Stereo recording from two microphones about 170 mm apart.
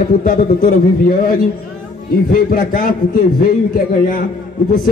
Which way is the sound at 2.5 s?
55° left (ahead or behind).